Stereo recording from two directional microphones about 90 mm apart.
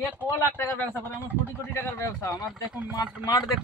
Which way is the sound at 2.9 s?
50° left (ahead or behind).